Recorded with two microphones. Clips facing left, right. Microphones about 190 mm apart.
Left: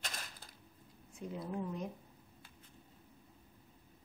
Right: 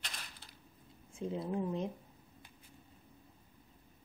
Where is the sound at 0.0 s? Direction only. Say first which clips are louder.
Left 3 dB; 45° left (ahead or behind).